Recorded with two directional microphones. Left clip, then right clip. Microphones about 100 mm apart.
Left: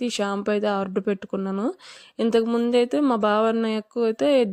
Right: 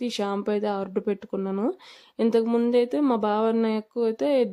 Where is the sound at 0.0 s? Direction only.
30° left (ahead or behind).